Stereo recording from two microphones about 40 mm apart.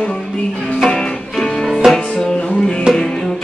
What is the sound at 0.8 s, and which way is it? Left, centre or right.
Music, centre.